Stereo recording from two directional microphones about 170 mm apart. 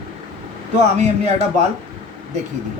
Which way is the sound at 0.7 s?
40° right (ahead or behind).